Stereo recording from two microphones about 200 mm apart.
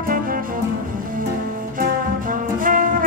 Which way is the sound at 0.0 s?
45° right (ahead or behind).